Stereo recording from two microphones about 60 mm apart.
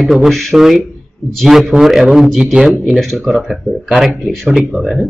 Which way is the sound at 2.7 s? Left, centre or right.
Centre.